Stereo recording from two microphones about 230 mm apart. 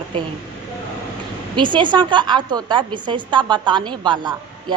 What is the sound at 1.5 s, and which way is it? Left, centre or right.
A woman's voice, right.